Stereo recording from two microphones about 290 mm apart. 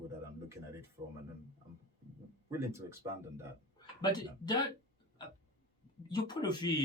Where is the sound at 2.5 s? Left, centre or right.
Centre.